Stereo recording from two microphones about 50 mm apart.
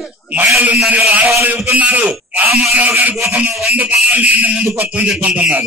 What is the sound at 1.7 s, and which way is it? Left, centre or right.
Speech, right.